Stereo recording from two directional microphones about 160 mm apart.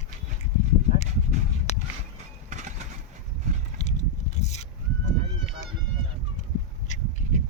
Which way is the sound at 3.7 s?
45° left (ahead or behind).